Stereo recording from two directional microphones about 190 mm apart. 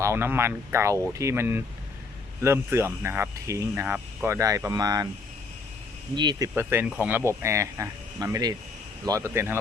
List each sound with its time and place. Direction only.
0.0 s speech: 15° right (ahead or behind)
6.1 s speech: 25° right (ahead or behind)
6.6 s speech: 10° right (ahead or behind)